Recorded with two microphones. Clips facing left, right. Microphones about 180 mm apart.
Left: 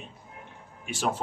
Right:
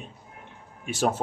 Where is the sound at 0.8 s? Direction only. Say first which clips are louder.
Right 4 dB; 45° right (ahead or behind).